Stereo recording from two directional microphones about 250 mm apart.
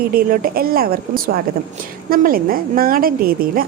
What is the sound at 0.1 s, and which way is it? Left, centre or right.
A woman's voice, right.